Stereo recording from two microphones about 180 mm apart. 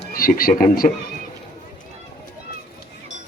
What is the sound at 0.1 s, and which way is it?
Speech, 55° left (ahead or behind).